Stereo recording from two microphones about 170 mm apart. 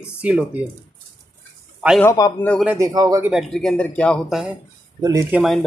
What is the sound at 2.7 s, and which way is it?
Speech, 20° right (ahead or behind).